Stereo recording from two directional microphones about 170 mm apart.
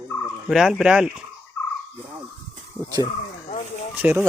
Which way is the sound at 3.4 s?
45° left (ahead or behind).